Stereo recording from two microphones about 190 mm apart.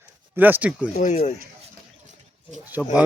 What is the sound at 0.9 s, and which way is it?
Speech, 40° left (ahead or behind).